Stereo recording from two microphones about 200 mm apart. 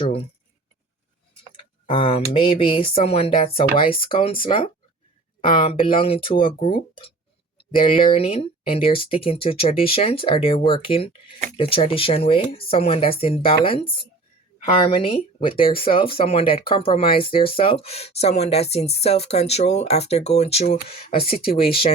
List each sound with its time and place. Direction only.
1.9 s speech: 25° left (ahead or behind)